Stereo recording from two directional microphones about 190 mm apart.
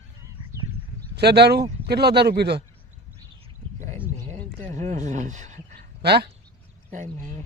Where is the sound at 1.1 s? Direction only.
60° right (ahead or behind).